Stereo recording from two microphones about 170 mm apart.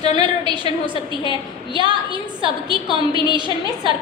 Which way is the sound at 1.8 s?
30° right (ahead or behind).